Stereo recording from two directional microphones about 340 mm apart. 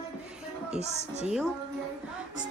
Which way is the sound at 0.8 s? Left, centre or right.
Centre.